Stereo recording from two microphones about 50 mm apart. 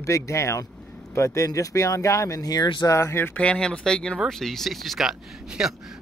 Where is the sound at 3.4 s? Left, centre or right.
Centre.